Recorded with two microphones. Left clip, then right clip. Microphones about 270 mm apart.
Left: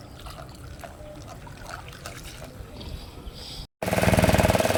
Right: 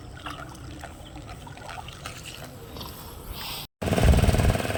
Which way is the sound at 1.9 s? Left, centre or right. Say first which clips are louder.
Right 1 dB; centre.